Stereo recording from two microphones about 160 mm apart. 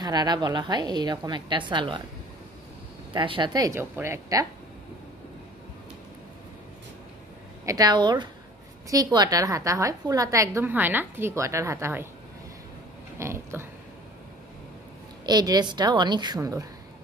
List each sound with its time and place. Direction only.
0.0 s a woman's voice: 25° right (ahead or behind)
3.1 s a woman's voice: 30° right (ahead or behind)
7.6 s a woman's voice: 25° right (ahead or behind)
13.2 s a sound: 15° right (ahead or behind)
15.2 s a woman's voice: 25° right (ahead or behind)